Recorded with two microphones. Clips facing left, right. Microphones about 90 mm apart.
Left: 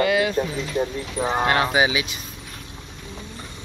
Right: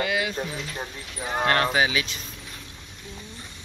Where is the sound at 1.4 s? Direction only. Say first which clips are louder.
Left 1 dB; 5° left (ahead or behind).